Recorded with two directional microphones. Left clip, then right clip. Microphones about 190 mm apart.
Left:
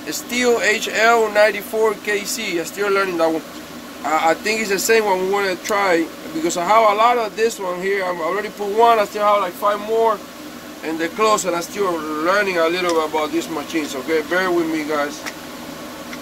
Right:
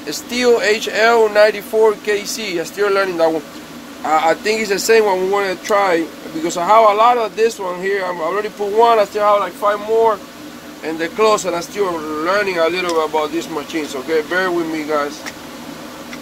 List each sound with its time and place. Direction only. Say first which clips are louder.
0.0 s speech: right 3 dB; 30° right (ahead or behind)